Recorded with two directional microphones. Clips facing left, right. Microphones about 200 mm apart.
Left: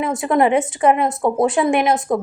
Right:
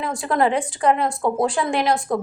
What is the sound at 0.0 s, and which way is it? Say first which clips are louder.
Speech: left 4 dB; 20° left (ahead or behind).